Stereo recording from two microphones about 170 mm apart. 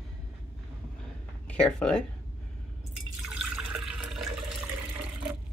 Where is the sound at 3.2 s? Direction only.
5° right (ahead or behind).